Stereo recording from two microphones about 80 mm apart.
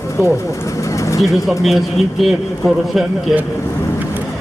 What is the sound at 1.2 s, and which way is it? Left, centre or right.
A man's voice, centre.